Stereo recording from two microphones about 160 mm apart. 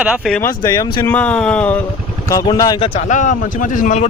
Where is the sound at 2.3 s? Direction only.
20° left (ahead or behind).